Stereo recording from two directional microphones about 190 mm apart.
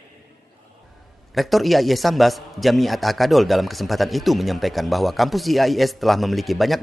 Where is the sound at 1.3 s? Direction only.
Centre (ahead or behind).